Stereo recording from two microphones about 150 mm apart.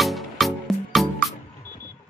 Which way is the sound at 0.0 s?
Centre (ahead or behind).